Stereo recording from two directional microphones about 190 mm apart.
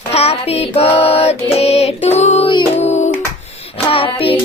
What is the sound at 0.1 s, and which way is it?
Child singing, 35° left (ahead or behind).